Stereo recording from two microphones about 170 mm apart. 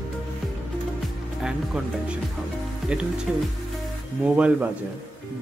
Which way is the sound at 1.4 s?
5° right (ahead or behind).